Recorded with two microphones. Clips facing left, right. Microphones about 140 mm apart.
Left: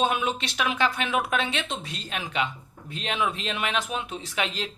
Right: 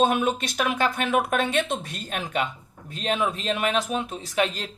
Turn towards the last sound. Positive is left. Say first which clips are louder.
# right 4 dB
turn(degrees=-45)  # may be behind; listen again after turning